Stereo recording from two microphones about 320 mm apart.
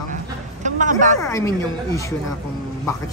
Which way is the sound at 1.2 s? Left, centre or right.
Centre.